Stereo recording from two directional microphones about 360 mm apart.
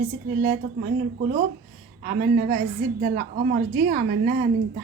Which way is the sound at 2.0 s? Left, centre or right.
Right.